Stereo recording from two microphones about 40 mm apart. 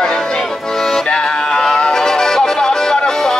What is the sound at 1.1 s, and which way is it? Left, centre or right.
Music, left.